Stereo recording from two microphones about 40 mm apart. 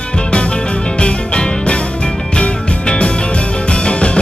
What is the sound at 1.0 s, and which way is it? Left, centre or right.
Music, left.